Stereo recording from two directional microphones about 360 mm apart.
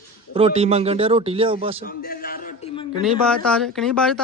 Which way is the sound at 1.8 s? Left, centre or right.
Left.